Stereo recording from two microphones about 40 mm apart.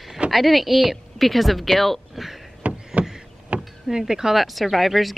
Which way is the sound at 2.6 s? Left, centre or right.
Right.